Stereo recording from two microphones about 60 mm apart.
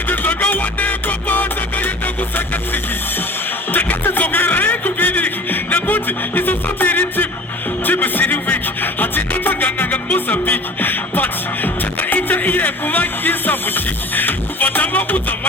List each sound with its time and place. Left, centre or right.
0.1 s music: left
3.7 s music: left